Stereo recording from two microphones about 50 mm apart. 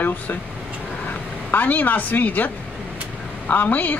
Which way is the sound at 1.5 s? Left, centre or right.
Left.